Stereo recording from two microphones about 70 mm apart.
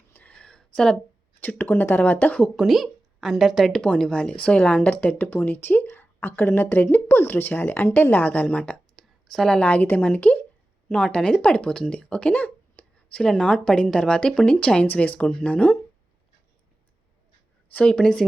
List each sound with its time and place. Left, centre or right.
0.1 s a sound: left
1.4 s a woman's voice: left
2.6 s a woman's voice: centre
3.7 s a woman's voice: centre
9.6 s a woman's voice: centre
10.8 s speech: centre
17.7 s speech: left
17.9 s speech: centre